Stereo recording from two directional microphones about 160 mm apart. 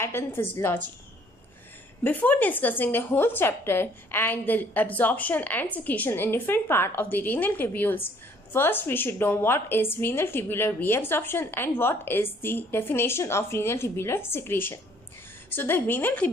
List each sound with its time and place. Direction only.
0.0 s a woman's voice: 15° left (ahead or behind)
2.0 s a woman's voice: 10° left (ahead or behind)